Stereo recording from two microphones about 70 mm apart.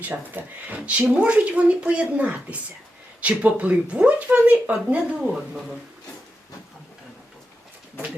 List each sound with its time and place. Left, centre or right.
0.4 s speech: right